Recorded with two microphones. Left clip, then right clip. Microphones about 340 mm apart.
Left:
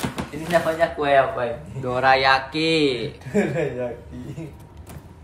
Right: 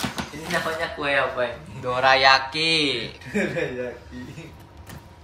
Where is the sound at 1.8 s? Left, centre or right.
Centre.